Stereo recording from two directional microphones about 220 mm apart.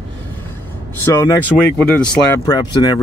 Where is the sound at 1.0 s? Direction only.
15° left (ahead or behind).